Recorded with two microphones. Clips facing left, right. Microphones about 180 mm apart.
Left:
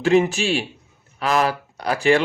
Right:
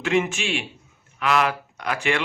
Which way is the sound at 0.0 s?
35° left (ahead or behind).